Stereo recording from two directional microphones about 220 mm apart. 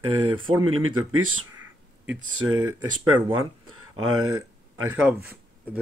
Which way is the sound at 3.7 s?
75° right (ahead or behind).